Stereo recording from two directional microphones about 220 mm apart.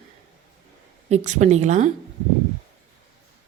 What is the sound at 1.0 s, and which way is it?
Speech, 30° right (ahead or behind).